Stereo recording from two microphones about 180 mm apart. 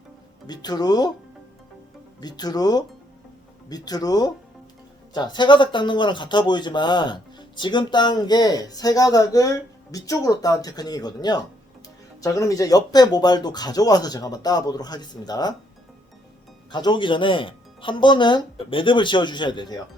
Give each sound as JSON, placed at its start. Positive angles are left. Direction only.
{"t": 0.4, "sound": "speech", "side_deg": 20}
{"t": 2.2, "sound": "speech", "side_deg": 20}
{"t": 16.7, "sound": "speech", "side_deg": 25}